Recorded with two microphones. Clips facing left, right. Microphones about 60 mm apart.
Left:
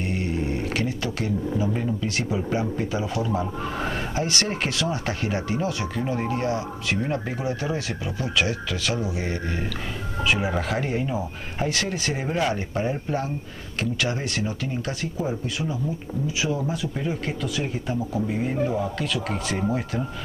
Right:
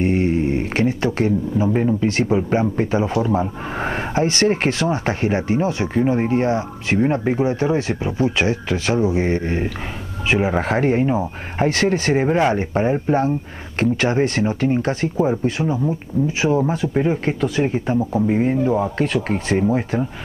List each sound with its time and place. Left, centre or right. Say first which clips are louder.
0.0 s speech: right 9 dB; right